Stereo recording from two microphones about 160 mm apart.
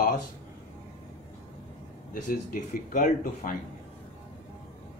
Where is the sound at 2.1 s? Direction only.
55° left (ahead or behind).